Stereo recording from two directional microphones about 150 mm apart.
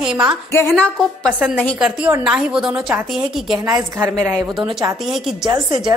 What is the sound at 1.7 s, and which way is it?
A woman's voice, 5° right (ahead or behind).